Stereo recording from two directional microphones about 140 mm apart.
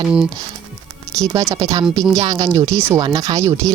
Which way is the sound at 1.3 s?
25° right (ahead or behind).